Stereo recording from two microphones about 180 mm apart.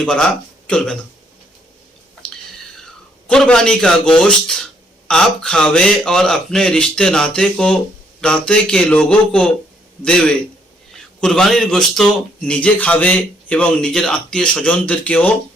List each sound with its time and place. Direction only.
0.0 s a man's voice: 5° left (ahead or behind)
2.2 s a sound: 5° left (ahead or behind)
3.2 s a man's voice: 5° left (ahead or behind)